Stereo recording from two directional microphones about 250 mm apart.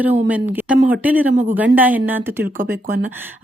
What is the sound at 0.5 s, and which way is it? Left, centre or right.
Speech, centre.